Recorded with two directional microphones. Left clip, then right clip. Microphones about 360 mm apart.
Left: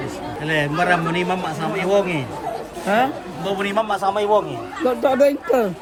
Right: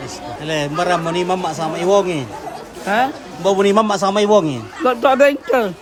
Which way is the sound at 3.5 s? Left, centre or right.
Centre.